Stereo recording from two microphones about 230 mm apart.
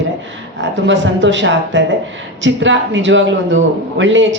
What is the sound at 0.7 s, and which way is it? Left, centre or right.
Speech, right.